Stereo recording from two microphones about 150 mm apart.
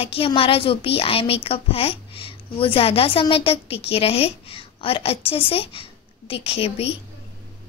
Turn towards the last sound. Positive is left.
turn(degrees=40)  # may be behind; listen again after turning